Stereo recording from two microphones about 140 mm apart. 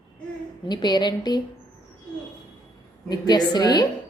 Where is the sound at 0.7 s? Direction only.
30° left (ahead or behind).